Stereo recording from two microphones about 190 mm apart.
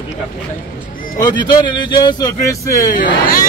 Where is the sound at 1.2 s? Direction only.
25° left (ahead or behind).